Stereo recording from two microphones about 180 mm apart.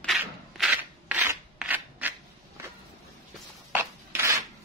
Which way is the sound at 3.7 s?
15° right (ahead or behind).